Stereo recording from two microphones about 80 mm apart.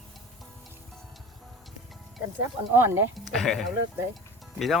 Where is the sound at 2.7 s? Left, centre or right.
Right.